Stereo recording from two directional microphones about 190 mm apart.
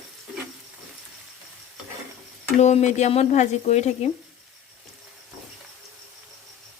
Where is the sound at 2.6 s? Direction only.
35° left (ahead or behind).